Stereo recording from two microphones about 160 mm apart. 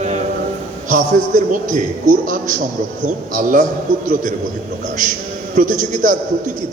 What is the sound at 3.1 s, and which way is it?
Speech, 55° right (ahead or behind).